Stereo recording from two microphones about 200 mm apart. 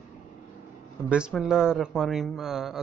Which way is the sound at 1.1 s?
5° right (ahead or behind).